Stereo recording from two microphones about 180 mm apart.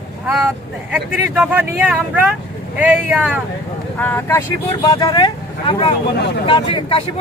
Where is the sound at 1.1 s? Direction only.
10° right (ahead or behind).